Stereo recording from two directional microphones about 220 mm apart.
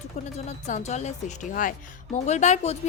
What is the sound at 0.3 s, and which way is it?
A woman's voice, 30° left (ahead or behind).